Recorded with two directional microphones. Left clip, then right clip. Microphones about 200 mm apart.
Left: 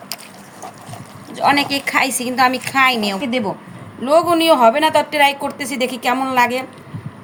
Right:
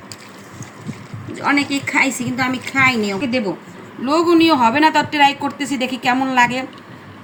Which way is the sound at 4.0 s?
45° left (ahead or behind).